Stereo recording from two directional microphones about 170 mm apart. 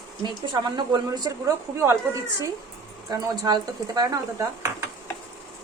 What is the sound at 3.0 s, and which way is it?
Speech, 20° right (ahead or behind).